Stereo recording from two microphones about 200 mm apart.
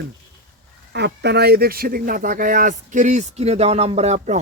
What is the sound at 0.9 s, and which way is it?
Speech, 55° right (ahead or behind).